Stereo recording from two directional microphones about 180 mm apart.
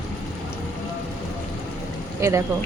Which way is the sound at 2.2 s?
15° right (ahead or behind).